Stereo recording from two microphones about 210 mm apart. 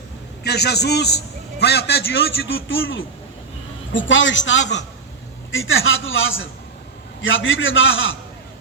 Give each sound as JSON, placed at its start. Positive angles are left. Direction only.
{"t": 0.4, "sound": "a man's voice", "side_deg": 50}
{"t": 2.6, "sound": "a man's voice", "side_deg": 70}